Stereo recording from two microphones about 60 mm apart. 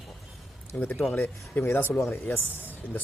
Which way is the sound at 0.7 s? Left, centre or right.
Left.